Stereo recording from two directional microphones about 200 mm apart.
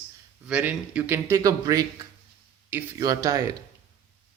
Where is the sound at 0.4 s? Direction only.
5° right (ahead or behind).